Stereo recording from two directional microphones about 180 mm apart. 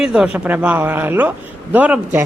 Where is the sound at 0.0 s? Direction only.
5° right (ahead or behind).